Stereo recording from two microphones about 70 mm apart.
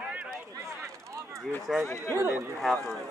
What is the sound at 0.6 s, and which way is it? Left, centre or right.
Speech, right.